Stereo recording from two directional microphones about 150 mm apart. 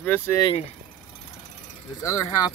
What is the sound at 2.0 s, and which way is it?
Speech, 20° left (ahead or behind).